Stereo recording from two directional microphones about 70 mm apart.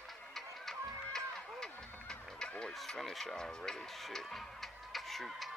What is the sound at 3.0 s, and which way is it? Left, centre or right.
Speech, centre.